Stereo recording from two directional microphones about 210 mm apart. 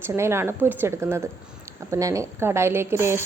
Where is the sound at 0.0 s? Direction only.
10° right (ahead or behind).